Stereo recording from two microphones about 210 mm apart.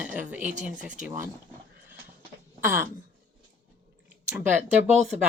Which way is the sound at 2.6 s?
10° right (ahead or behind).